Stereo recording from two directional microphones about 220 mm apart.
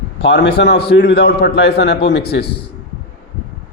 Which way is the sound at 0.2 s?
50° left (ahead or behind).